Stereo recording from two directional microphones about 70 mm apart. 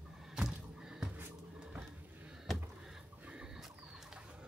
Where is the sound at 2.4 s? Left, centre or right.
Centre.